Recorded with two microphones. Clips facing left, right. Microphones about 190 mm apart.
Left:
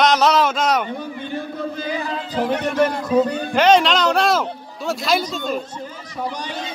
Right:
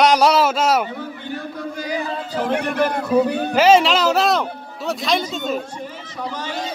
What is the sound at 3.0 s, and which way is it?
A man's voice, 10° right (ahead or behind).